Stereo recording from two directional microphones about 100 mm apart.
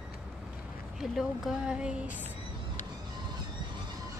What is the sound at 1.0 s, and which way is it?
Speech, 5° right (ahead or behind).